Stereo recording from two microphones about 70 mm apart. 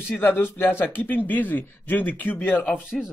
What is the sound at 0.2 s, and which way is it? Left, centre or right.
A man's voice, left.